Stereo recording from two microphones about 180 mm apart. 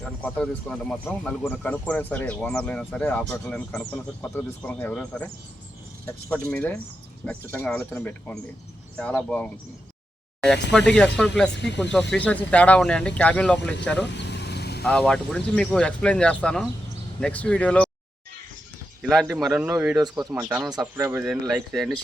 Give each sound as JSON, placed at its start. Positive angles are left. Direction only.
{"t": 0.0, "sound": "speech", "side_deg": 5}
{"t": 6.3, "sound": "speech", "side_deg": 10}
{"t": 11.5, "sound": "speech", "side_deg": 75}
{"t": 11.8, "sound": "speech", "side_deg": 5}
{"t": 14.0, "sound": "vehicle", "side_deg": 70}
{"t": 14.8, "sound": "speech", "side_deg": 5}
{"t": 19.0, "sound": "speech", "side_deg": 0}
{"t": 20.7, "sound": "speech", "side_deg": -20}
{"t": 21.7, "sound": "speech", "side_deg": 0}